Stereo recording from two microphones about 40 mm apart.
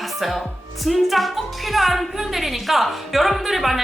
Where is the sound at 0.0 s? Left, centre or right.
Centre.